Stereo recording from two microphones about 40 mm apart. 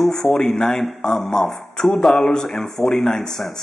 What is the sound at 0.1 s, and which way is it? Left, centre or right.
Speech, centre.